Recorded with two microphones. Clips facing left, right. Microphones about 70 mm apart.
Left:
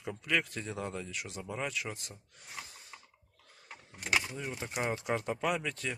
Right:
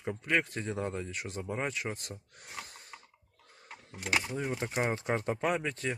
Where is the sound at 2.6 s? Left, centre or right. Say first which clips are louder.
Right 2 dB; right.